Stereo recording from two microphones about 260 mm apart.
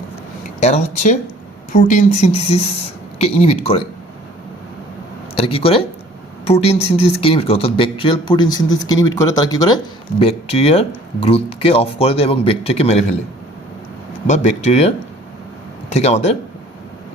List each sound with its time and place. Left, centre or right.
0.6 s speech: left
5.3 s speech: left
14.3 s speech: left